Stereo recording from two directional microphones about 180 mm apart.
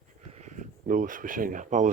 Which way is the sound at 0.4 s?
45° right (ahead or behind).